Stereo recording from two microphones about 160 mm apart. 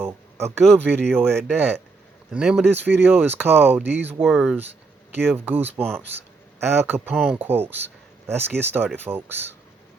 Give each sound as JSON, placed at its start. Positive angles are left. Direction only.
{"t": 0.0, "sound": "a sound", "side_deg": -15}
{"t": 0.6, "sound": "speech", "side_deg": 5}
{"t": 2.3, "sound": "speech", "side_deg": -5}
{"t": 4.2, "sound": "speech", "side_deg": 0}
{"t": 5.1, "sound": "speech", "side_deg": -10}